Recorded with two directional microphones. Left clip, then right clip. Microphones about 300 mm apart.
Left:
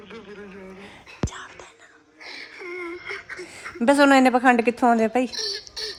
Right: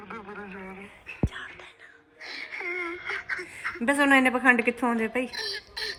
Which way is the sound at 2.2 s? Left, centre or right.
Centre.